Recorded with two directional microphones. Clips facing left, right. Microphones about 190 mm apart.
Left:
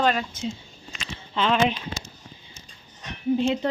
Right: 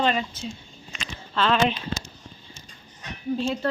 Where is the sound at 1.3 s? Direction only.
15° left (ahead or behind).